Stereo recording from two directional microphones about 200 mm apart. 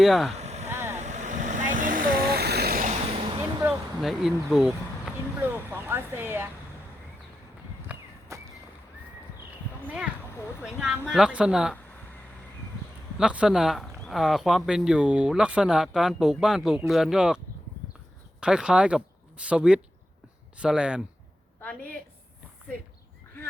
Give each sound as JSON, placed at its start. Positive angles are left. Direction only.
{"t": 0.0, "sound": "speech", "side_deg": 0}
{"t": 0.3, "sound": "a sound", "side_deg": -35}
{"t": 0.7, "sound": "vehicle", "side_deg": -10}
{"t": 0.9, "sound": "vehicle", "side_deg": -35}
{"t": 3.6, "sound": "speech", "side_deg": -5}
{"t": 8.3, "sound": "a sound", "side_deg": -15}
{"t": 9.8, "sound": "speech", "side_deg": -5}
{"t": 13.1, "sound": "speech", "side_deg": -5}
{"t": 21.6, "sound": "a woman's voice", "side_deg": 5}